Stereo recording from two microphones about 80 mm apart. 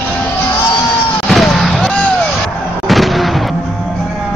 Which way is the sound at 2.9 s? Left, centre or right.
Centre.